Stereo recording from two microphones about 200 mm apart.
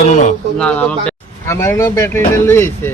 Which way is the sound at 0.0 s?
40° left (ahead or behind).